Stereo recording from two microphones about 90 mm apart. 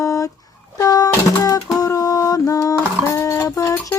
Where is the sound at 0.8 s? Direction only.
45° left (ahead or behind).